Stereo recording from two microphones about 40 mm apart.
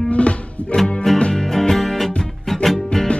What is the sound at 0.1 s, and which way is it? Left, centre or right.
Music, left.